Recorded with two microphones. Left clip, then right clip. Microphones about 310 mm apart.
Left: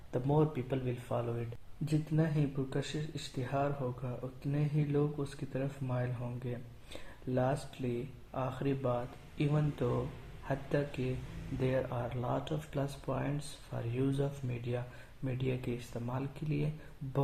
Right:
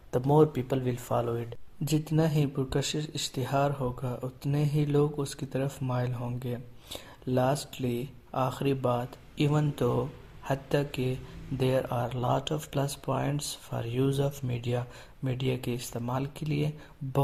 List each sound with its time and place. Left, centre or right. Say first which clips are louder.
0.1 s speech: right 8 dB; right